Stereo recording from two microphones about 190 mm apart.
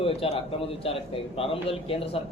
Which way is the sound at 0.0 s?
30° left (ahead or behind).